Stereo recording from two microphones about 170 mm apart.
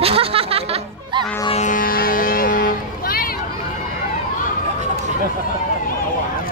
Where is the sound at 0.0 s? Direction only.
35° right (ahead or behind).